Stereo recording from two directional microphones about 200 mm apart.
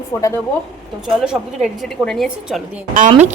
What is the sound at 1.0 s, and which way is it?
A woman's voice, 5° right (ahead or behind).